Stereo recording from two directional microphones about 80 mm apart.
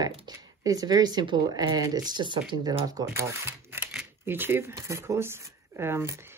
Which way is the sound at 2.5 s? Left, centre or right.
Right.